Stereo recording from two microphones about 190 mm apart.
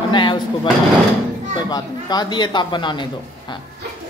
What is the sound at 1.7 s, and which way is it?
Speech, 20° left (ahead or behind).